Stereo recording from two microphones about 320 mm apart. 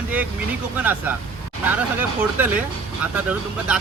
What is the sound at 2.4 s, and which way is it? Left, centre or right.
Speech, centre.